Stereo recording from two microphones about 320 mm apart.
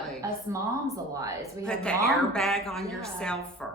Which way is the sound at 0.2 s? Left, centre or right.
Centre.